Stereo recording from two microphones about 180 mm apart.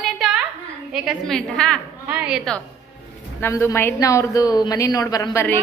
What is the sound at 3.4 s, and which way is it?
A woman's voice, 15° left (ahead or behind).